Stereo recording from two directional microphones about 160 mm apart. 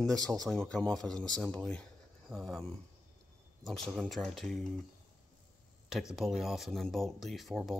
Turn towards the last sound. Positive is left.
turn(degrees=0)  # may be behind; listen again after turning